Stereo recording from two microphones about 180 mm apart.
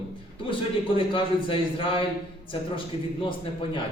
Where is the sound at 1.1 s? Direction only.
30° left (ahead or behind).